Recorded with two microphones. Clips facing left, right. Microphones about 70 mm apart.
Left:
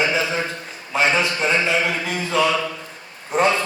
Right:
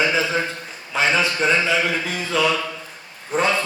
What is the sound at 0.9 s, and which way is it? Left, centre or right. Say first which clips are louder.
Speech: left 1 dB; left.